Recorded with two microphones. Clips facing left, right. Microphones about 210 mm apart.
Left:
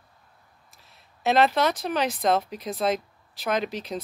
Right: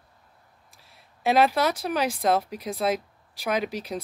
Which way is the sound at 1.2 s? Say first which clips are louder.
Even; 10° right (ahead or behind).